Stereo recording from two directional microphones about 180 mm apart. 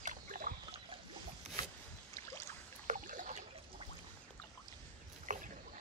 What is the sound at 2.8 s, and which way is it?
Rowboat, 45° right (ahead or behind).